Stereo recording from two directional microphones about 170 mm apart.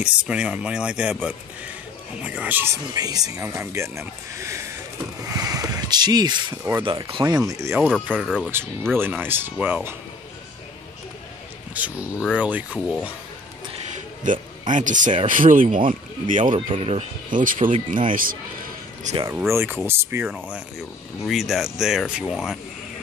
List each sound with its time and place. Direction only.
0.0 s speech: 5° right (ahead or behind)
8.1 s speech: 5° right (ahead or behind)
11.7 s speech: 10° right (ahead or behind)
14.2 s speech: 50° right (ahead or behind)
16.4 s speech: 30° right (ahead or behind)
17.3 s speech: 50° right (ahead or behind)
19.1 s speech: 45° right (ahead or behind)
19.5 s speech: 15° right (ahead or behind)
21.3 s speech: centre (ahead or behind)